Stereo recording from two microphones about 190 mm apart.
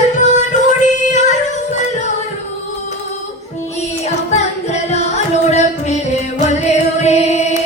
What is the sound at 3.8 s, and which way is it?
Music, 35° left (ahead or behind).